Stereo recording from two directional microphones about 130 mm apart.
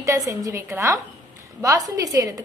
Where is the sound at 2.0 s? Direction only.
25° right (ahead or behind).